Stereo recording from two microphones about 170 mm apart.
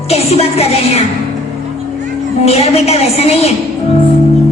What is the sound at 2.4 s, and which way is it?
A woman's voice, 35° left (ahead or behind).